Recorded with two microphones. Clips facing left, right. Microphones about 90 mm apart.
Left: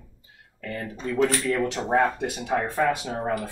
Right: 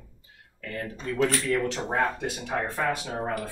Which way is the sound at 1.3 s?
15° left (ahead or behind).